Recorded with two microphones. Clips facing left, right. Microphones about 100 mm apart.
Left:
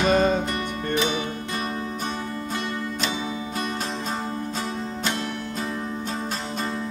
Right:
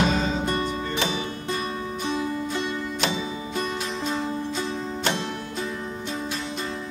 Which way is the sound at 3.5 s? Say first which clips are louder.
Right 3 dB; 40° left (ahead or behind).